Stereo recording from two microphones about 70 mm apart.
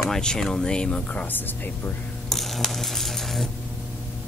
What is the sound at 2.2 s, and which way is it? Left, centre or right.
Coin, centre.